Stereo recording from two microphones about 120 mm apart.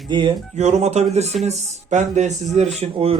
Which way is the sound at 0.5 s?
65° right (ahead or behind).